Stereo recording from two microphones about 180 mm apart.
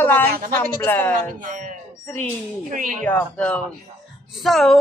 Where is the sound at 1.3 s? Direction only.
45° right (ahead or behind).